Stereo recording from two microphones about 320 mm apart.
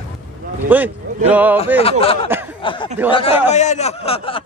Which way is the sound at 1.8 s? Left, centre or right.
Centre.